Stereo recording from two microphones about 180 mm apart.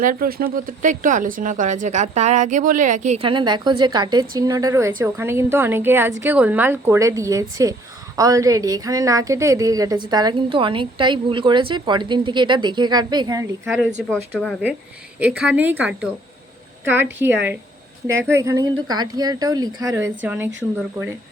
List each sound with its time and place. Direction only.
0.0 s speech: 50° right (ahead or behind); by 13.5 s 20° right (ahead or behind)
14.1 s a woman's voice: 5° left (ahead or behind); by 20.0 s 20° right (ahead or behind)
20.0 s a woman's voice: 10° right (ahead or behind)